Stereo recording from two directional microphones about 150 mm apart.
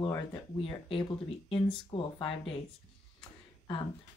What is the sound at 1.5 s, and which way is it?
Speech, 35° left (ahead or behind).